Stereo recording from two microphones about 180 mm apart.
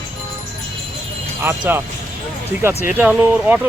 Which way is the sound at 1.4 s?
10° right (ahead or behind).